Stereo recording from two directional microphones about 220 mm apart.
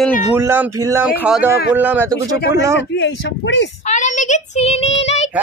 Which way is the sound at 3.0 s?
55° left (ahead or behind).